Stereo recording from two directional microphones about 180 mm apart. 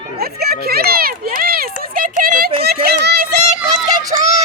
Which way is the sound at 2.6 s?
60° right (ahead or behind).